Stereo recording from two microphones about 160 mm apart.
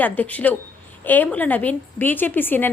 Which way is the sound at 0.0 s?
10° left (ahead or behind).